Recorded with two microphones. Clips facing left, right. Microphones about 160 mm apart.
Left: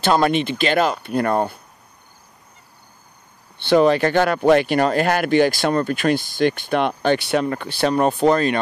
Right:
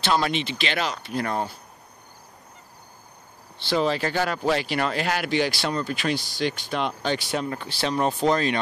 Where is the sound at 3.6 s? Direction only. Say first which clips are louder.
Left 9 dB; 60° left (ahead or behind).